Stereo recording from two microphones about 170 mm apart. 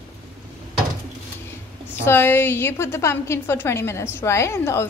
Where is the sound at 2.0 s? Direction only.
15° left (ahead or behind).